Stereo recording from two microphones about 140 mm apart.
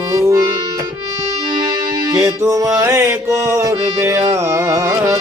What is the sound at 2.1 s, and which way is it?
Music, 20° right (ahead or behind).